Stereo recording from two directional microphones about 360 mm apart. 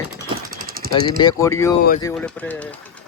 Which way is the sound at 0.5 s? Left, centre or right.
Right.